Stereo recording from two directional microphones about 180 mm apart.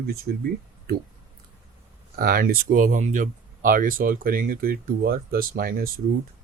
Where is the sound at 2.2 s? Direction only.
55° right (ahead or behind).